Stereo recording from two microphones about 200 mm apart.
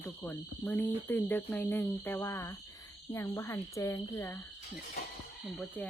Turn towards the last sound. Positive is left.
turn(degrees=5)  # may be behind; listen again after turning